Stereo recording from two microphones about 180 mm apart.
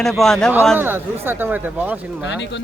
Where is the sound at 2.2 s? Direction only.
85° left.